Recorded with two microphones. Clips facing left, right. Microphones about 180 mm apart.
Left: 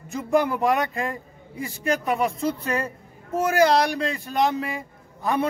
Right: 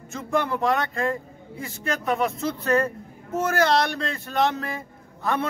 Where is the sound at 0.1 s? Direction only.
15° left (ahead or behind).